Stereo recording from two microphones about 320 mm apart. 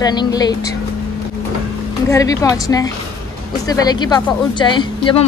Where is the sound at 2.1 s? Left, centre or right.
Centre.